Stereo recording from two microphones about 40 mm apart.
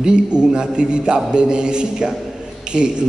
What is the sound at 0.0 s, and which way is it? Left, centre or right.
A man's voice, right.